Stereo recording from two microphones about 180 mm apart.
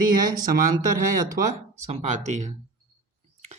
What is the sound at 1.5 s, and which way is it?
Speech, 40° right (ahead or behind).